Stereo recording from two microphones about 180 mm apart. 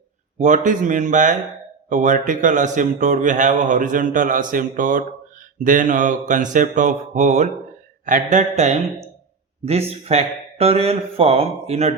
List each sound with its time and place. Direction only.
0.3 s a man's voice: 40° right (ahead or behind)